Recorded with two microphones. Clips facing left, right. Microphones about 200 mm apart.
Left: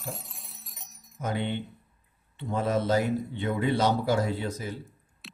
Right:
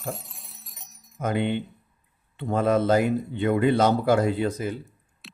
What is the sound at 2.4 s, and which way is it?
Speech, 55° right (ahead or behind).